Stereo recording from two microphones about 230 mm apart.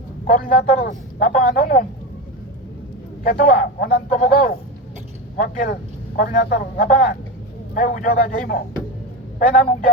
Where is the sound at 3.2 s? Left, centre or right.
Left.